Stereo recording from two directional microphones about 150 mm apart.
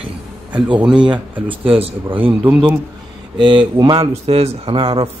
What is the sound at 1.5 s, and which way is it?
Speech, 35° right (ahead or behind).